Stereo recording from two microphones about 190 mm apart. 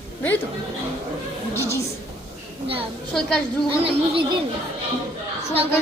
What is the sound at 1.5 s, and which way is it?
Child singing, 15° left (ahead or behind).